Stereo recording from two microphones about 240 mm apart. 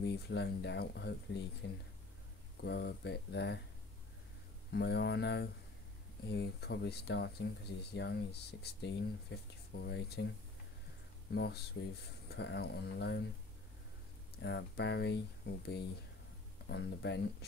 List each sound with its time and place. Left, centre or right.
0.0 s speech: left
4.6 s speech: left
11.3 s speech: left
14.4 s speech: left